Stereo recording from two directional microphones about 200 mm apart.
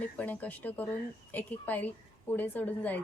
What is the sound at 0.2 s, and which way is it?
A woman's voice, 5° left (ahead or behind).